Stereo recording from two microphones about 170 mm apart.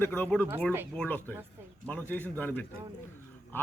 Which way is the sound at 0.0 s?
10° left (ahead or behind).